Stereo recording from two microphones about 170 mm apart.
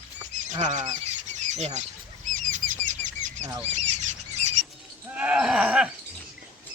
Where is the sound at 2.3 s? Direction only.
50° right (ahead or behind).